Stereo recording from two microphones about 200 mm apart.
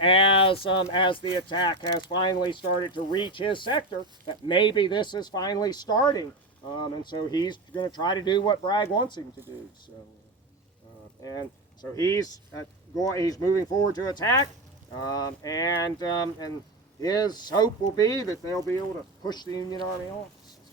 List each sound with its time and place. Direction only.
0.0 s speech: 25° left (ahead or behind)
1.7 s speech: 60° right (ahead or behind)
2.0 s speech: 20° left (ahead or behind)
11.2 s speech: 20° left (ahead or behind)